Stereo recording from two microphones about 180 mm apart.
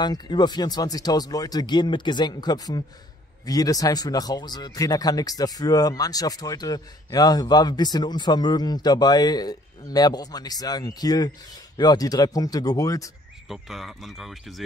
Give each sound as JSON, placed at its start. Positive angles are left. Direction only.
{"t": 0.0, "sound": "speech", "side_deg": 25}
{"t": 13.5, "sound": "speech", "side_deg": 0}